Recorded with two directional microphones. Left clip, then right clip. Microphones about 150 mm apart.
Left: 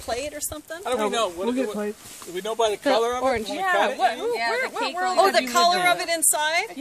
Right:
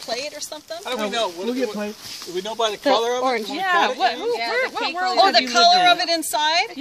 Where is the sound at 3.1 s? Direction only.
5° right (ahead or behind).